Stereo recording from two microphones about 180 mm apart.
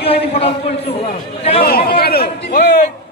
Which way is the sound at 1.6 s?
55° left (ahead or behind).